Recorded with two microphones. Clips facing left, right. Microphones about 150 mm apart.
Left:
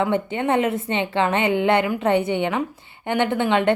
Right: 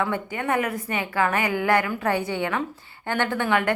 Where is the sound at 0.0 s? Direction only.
25° left (ahead or behind).